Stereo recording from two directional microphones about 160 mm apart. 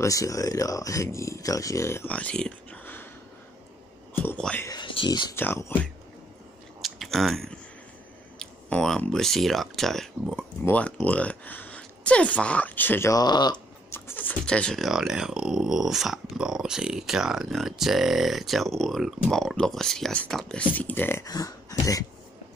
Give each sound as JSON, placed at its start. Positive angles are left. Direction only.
{"t": 0.0, "sound": "speech", "side_deg": 20}
{"t": 4.2, "sound": "a sound", "side_deg": 10}
{"t": 4.6, "sound": "a sound", "side_deg": 30}
{"t": 5.3, "sound": "speech", "side_deg": 15}
{"t": 6.8, "sound": "chewing", "side_deg": 0}
{"t": 8.4, "sound": "speech", "side_deg": 5}
{"t": 13.9, "sound": "speech", "side_deg": 10}